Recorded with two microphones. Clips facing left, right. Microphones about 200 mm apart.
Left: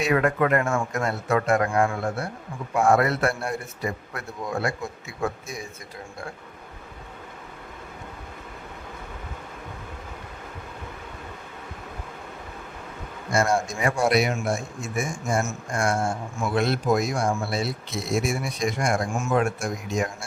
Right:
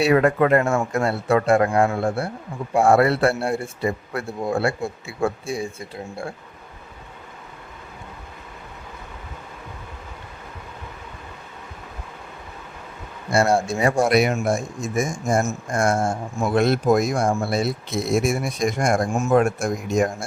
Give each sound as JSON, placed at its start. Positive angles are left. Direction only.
{"t": 0.0, "sound": "a man's voice", "side_deg": -30}
{"t": 13.3, "sound": "speech", "side_deg": -30}